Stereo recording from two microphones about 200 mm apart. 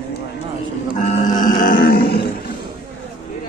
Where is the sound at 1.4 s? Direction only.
40° left (ahead or behind).